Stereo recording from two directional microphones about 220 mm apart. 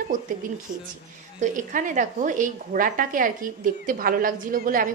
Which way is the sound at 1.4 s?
35° right (ahead or behind).